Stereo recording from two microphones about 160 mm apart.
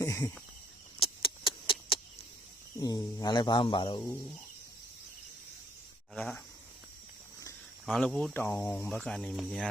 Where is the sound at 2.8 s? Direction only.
25° left (ahead or behind).